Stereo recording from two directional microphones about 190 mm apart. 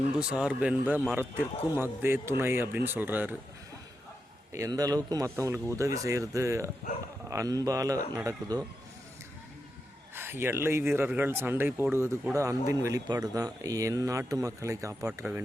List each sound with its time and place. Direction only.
0.2 s speech: 5° right (ahead or behind)
4.5 s speech: 15° right (ahead or behind)
10.2 s speech: 10° right (ahead or behind)